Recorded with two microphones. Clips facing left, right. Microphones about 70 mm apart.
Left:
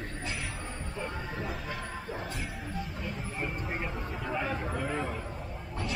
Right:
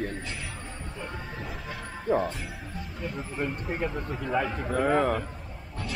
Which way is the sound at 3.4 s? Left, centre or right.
Centre.